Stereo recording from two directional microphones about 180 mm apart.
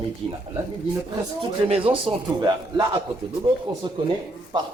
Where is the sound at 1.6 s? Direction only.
30° right (ahead or behind).